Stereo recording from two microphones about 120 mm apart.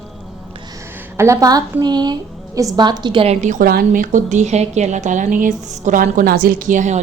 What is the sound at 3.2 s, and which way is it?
A woman's voice, 75° right (ahead or behind).